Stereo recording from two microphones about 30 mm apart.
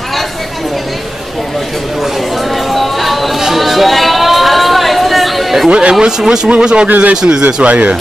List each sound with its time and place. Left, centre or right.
2.7 s music: centre
3.3 s chatter: centre
5.7 s speech: right
5.9 s speech: right
7.6 s speech: right